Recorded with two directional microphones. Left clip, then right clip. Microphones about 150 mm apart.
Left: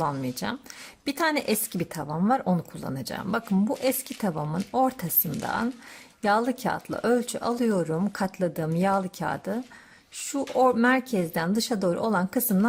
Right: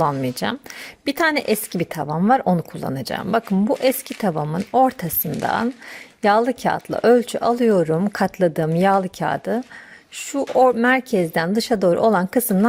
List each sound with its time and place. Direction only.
0.0 s speech: 35° right (ahead or behind)
10.8 s speech: 30° right (ahead or behind)